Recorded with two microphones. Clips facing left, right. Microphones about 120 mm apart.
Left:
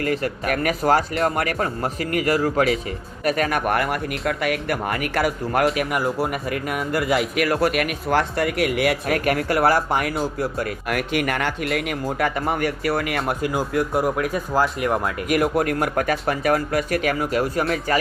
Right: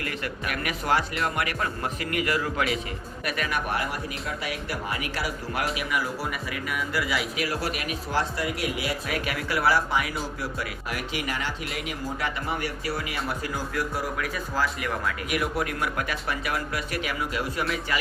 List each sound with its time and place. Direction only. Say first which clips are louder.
0.0 s speech: left 9 dB; 40° left (ahead or behind)